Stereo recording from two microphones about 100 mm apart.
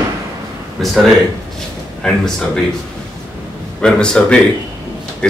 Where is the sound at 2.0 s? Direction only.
5° left (ahead or behind).